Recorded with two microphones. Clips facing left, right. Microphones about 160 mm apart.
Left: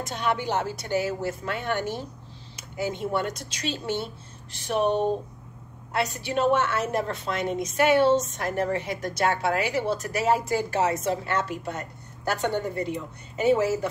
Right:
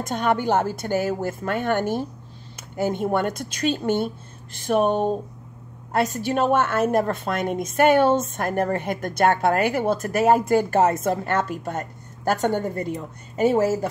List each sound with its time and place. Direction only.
0.0 s a woman's voice: 50° right (ahead or behind)
5.9 s a woman's voice: 45° right (ahead or behind)